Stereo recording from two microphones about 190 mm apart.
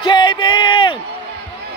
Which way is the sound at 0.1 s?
25° left (ahead or behind).